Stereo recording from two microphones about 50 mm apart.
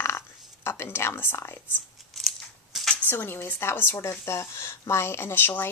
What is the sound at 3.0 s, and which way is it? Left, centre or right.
Speech, left.